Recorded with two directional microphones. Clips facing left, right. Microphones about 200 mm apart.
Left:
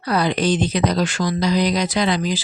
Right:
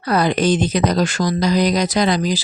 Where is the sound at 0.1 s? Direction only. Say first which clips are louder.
Right 3 dB; 45° right (ahead or behind).